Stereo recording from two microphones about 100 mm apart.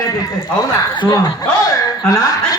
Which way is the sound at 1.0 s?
40° left (ahead or behind).